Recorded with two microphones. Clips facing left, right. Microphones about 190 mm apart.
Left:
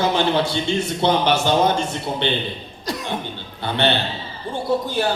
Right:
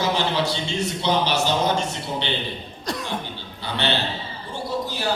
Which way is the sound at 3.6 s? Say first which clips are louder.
Left 5 dB; 55° left (ahead or behind).